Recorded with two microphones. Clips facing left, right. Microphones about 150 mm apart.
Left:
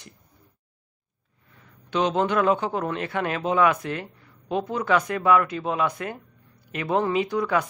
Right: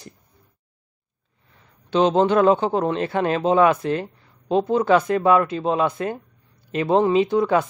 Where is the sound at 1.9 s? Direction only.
30° right (ahead or behind).